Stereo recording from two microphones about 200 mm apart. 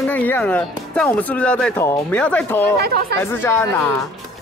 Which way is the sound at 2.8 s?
50° right (ahead or behind).